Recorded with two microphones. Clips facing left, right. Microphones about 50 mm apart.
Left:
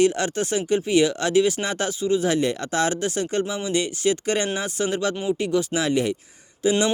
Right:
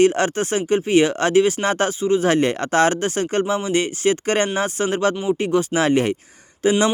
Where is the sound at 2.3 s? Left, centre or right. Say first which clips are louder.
Right 4 dB; right.